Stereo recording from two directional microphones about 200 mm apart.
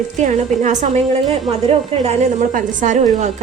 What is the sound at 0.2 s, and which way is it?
A woman's voice, 35° right (ahead or behind).